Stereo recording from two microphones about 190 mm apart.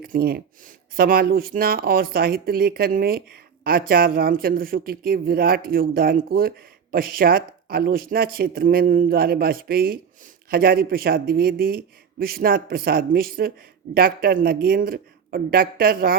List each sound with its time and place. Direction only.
0.0 s speech: 55° right (ahead or behind)